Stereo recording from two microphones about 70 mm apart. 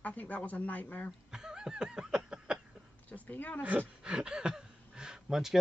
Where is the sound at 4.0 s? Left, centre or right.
Centre.